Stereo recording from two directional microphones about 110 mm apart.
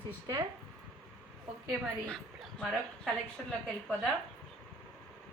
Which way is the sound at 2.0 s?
10° left (ahead or behind).